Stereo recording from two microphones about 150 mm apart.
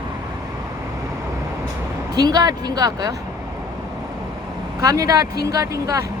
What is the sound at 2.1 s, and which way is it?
Speech, 25° right (ahead or behind).